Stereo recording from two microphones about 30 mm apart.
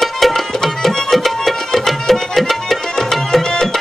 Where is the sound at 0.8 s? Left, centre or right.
Centre.